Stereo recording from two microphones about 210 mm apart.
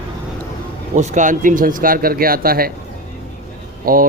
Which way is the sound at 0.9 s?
35° right (ahead or behind).